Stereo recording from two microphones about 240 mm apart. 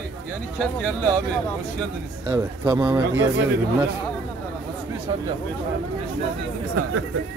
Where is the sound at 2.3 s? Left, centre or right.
Centre.